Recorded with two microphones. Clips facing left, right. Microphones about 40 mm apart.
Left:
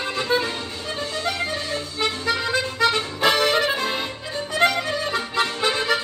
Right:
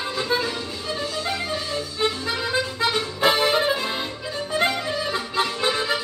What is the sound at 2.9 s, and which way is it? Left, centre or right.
Accordion, left.